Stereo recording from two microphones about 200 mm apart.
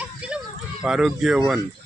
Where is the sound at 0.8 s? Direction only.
5° right (ahead or behind).